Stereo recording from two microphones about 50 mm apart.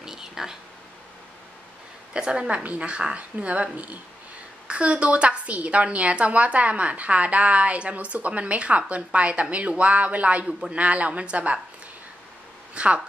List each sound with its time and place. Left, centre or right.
0.0 s a sound: centre
2.1 s a woman's voice: centre
12.7 s a woman's voice: right